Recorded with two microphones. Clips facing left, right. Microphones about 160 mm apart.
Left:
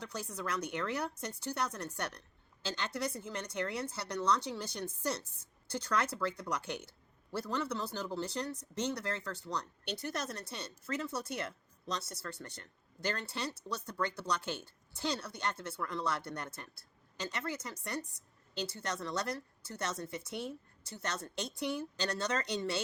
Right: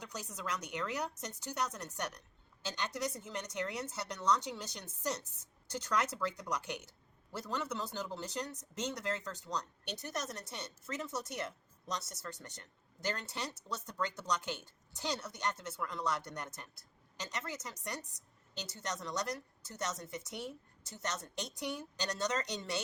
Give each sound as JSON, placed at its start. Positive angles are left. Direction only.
{"t": 0.0, "sound": "a woman's voice", "side_deg": -15}